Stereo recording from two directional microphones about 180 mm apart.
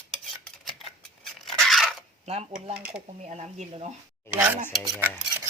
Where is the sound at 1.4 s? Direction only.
Centre (ahead or behind).